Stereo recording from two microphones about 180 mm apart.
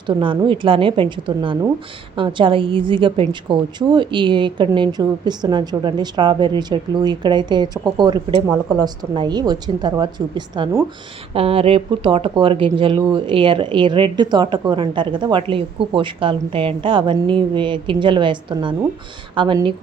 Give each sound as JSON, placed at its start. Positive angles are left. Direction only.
{"t": 0.1, "sound": "speech", "side_deg": -25}
{"t": 11.3, "sound": "speech", "side_deg": -30}